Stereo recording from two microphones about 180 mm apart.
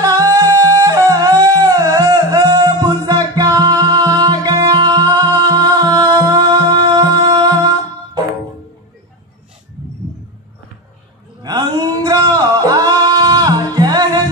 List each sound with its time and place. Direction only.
0.0 s music: 20° right (ahead or behind)
11.4 s music: 25° right (ahead or behind)